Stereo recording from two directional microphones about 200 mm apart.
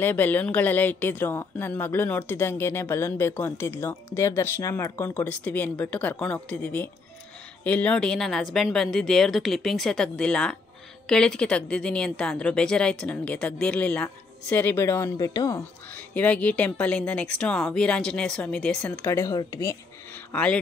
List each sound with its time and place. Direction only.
0.0 s a woman's voice: 10° left (ahead or behind)
19.0 s a woman's voice: 15° left (ahead or behind)
20.3 s a woman's voice: 5° left (ahead or behind)